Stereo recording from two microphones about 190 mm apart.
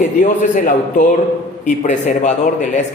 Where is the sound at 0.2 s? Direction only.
45° left (ahead or behind).